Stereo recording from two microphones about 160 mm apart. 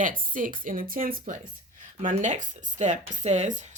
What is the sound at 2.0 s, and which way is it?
Speech, 50° right (ahead or behind).